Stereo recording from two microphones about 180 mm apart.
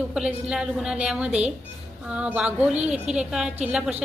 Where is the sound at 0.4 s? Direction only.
5° right (ahead or behind).